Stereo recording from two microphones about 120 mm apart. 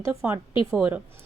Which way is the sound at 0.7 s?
10° right (ahead or behind).